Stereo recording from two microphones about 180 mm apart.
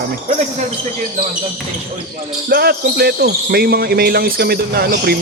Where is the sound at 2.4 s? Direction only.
60° right (ahead or behind).